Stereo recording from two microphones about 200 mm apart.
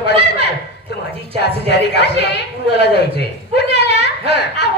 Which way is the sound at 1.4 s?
55° left (ahead or behind).